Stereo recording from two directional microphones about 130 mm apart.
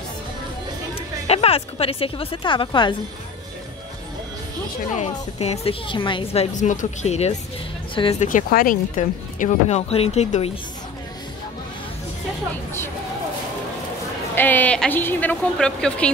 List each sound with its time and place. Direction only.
0.9 s a woman's voice: 50° left (ahead or behind)
4.9 s a woman's voice: 60° left (ahead or behind)
6.5 s speech: 75° left (ahead or behind); by 7.3 s 60° left (ahead or behind)
7.9 s speech: 40° left (ahead or behind)
8.2 s speech: 85° left
9.0 s speech: 80° left; by 10.6 s 50° left (ahead or behind)
14.3 s speech: 15° left (ahead or behind)